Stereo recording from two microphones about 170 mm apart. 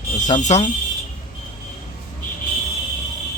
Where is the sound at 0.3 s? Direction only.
45° left (ahead or behind).